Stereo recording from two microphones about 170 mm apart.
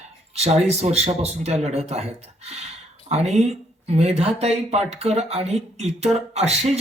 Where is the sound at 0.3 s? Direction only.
40° right (ahead or behind).